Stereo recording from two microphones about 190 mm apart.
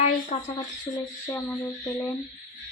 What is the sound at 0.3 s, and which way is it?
Speech, 30° left (ahead or behind).